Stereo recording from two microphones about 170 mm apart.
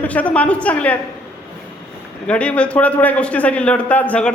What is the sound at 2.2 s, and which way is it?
Speech, 5° left (ahead or behind).